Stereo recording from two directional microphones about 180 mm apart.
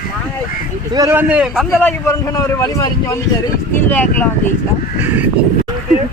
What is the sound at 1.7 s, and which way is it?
A man's voice, 15° left (ahead or behind).